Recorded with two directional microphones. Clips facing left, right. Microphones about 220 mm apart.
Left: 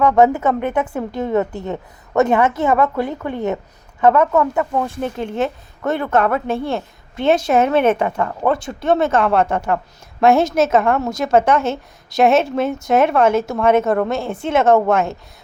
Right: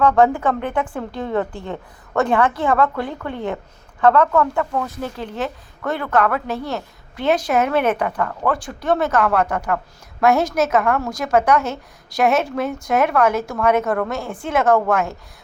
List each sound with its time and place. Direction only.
0.0 s speech: 20° left (ahead or behind)